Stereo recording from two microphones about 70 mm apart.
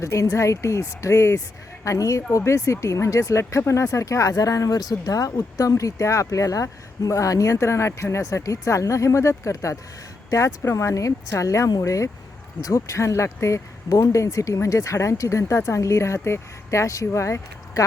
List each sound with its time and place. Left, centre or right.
0.0 s speech: left